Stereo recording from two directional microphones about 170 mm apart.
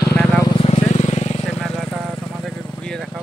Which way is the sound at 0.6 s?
40° left (ahead or behind).